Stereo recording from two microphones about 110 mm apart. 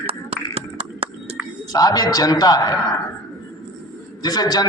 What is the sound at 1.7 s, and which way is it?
Speech, 35° left (ahead or behind).